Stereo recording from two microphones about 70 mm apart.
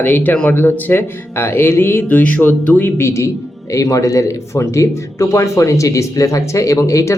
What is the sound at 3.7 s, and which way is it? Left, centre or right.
Speech, left.